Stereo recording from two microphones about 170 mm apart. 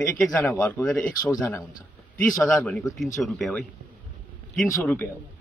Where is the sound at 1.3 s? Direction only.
20° left (ahead or behind).